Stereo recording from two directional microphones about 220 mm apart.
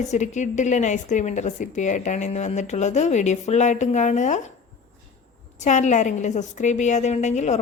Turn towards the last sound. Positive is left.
turn(degrees=30)  # may be behind; listen again after turning